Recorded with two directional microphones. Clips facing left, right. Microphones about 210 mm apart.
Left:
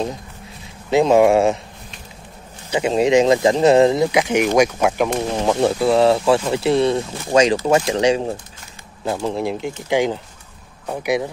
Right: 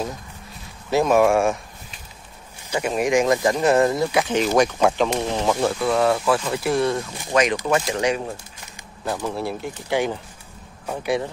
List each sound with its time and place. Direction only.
0.8 s speech: 20° left (ahead or behind)
2.7 s speech: 25° left (ahead or behind)
5.8 s speech: 30° left (ahead or behind)
9.0 s speech: 15° left (ahead or behind)